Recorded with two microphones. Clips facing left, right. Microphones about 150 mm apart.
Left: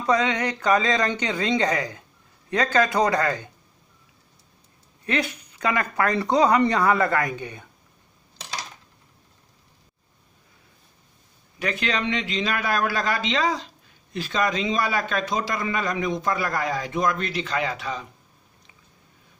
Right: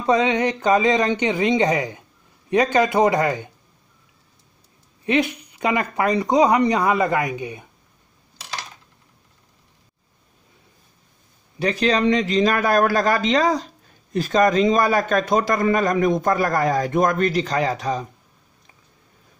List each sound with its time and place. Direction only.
0.0 s speech: 20° right (ahead or behind)
5.0 s speech: 20° right (ahead or behind)
11.6 s a man's voice: 35° right (ahead or behind)